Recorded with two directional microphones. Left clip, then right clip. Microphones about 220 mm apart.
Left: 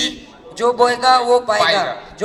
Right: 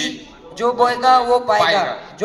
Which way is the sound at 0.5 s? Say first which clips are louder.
Left 2 dB; 25° left (ahead or behind).